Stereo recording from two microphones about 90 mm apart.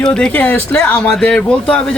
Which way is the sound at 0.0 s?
10° left (ahead or behind).